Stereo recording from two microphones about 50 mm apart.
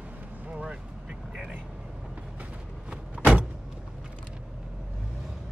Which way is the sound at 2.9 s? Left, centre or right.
Right.